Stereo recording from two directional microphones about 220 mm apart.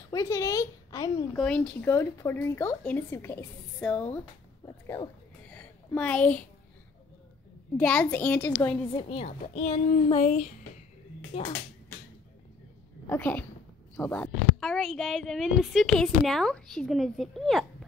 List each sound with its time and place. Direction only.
0.1 s a woman's voice: 15° left (ahead or behind)
1.3 s speech: 5° left (ahead or behind)
5.5 s a sound: 5° left (ahead or behind)
7.7 s a woman's voice: 5° left (ahead or behind)
8.9 s a woman's voice: 25° left (ahead or behind)
10.0 s a sound: 30° left (ahead or behind)
11.3 s a woman's voice: 25° left (ahead or behind)
13.0 s a woman's voice: 10° left (ahead or behind)